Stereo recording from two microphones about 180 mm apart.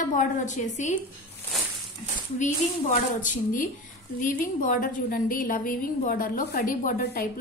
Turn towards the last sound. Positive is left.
turn(degrees=50)  # may be behind; listen again after turning